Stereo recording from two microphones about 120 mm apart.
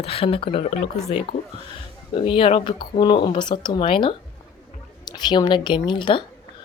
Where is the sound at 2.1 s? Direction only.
45° left (ahead or behind).